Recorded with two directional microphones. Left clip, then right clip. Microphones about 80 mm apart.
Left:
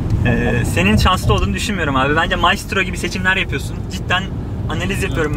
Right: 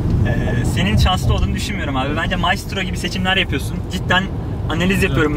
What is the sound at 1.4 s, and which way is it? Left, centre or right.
Speech, left.